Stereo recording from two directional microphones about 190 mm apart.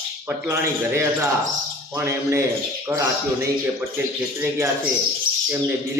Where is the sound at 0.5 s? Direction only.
15° right (ahead or behind).